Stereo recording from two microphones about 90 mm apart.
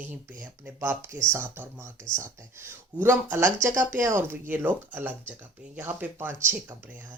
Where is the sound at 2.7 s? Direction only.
25° right (ahead or behind).